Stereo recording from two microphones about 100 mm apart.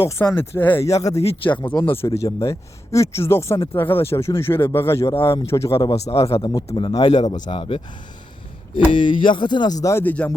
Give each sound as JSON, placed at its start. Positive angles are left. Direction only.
{"t": 0.0, "sound": "speech", "side_deg": 25}
{"t": 0.9, "sound": "speech", "side_deg": 35}
{"t": 1.5, "sound": "speech", "side_deg": 15}
{"t": 2.0, "sound": "speech", "side_deg": 35}
{"t": 6.1, "sound": "speech", "side_deg": 80}
{"t": 6.7, "sound": "speech", "side_deg": 50}
{"t": 10.0, "sound": "speech", "side_deg": 15}